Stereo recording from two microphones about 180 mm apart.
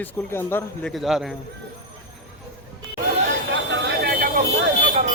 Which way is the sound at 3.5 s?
70° right (ahead or behind).